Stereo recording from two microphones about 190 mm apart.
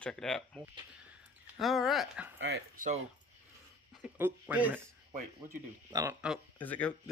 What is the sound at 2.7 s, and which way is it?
Speech, 45° right (ahead or behind).